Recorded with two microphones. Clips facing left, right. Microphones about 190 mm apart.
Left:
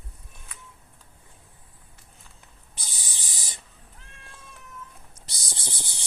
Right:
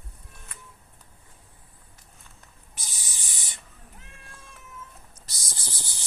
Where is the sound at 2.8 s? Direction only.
30° left (ahead or behind).